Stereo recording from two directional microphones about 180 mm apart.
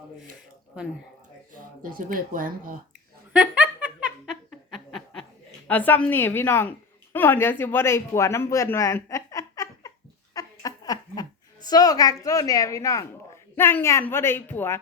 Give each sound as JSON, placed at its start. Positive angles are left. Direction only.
{"t": 1.8, "sound": "speech", "side_deg": -50}
{"t": 3.3, "sound": "laughter", "side_deg": -5}
{"t": 4.7, "sound": "snicker", "side_deg": 0}
{"t": 5.6, "sound": "a woman's voice", "side_deg": 10}
{"t": 10.3, "sound": "laughter", "side_deg": 20}
{"t": 11.7, "sound": "a woman's voice", "side_deg": 20}